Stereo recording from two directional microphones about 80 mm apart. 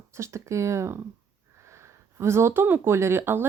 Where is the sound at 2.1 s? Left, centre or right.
Right.